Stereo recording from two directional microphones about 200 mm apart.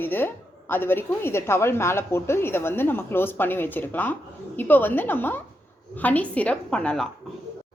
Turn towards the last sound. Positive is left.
turn(degrees=5)  # may be behind; listen again after turning